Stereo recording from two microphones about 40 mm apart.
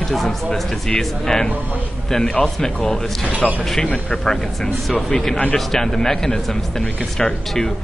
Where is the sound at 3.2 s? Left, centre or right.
Right.